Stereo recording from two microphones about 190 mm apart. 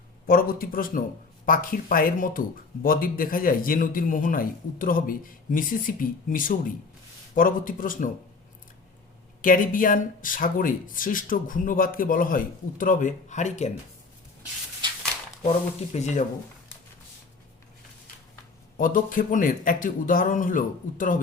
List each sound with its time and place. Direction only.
0.3 s speech: 50° left (ahead or behind)
9.4 s speech: 45° left (ahead or behind)
15.4 s speech: 35° left (ahead or behind)
18.8 s speech: 45° left (ahead or behind)